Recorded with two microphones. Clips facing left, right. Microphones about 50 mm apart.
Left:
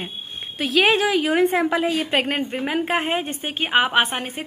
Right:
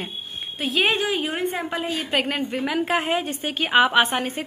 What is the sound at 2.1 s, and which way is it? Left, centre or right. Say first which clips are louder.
A woman's voice: left 1 dB; left.